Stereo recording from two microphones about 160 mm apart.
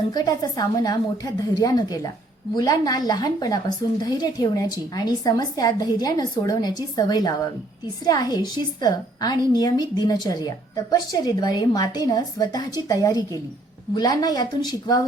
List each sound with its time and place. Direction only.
0.1 s a woman's voice: 25° left (ahead or behind)